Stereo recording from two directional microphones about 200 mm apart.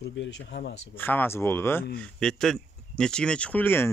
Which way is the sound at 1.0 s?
10° left (ahead or behind).